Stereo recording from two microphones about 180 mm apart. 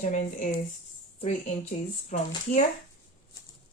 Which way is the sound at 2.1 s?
45° left (ahead or behind).